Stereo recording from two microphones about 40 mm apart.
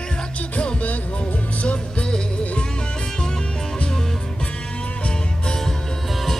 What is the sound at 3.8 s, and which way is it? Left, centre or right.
Music, centre.